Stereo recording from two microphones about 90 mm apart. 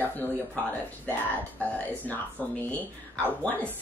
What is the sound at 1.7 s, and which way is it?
A woman's voice, 20° left (ahead or behind).